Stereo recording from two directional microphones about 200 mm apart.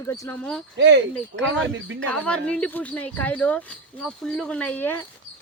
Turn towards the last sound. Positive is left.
turn(degrees=10)  # may be behind; listen again after turning